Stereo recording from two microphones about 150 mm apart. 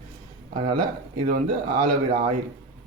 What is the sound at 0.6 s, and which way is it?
Speech, 85° right.